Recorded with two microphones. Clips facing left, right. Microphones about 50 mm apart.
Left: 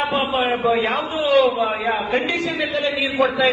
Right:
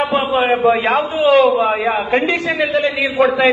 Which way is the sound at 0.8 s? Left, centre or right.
Right.